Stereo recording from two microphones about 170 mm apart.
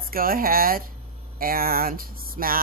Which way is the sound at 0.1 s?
60° right (ahead or behind).